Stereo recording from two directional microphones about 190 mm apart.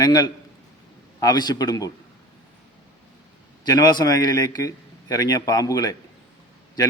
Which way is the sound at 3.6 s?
20° left (ahead or behind).